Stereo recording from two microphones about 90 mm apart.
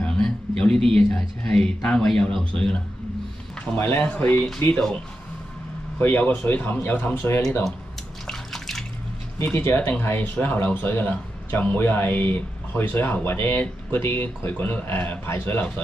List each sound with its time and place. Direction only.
0.0 s speech: 10° left (ahead or behind)
3.7 s speech: 25° left (ahead or behind)
5.9 s speech: 25° left (ahead or behind)
8.3 s bathtub: 5° left (ahead or behind)
9.4 s speech: 25° left (ahead or behind)